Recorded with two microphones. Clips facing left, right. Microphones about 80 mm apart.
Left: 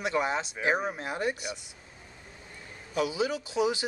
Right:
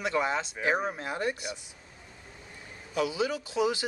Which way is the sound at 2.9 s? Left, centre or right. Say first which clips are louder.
Even; centre.